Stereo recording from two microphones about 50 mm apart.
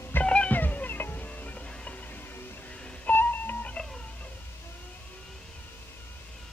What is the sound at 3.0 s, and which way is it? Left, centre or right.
Music, left.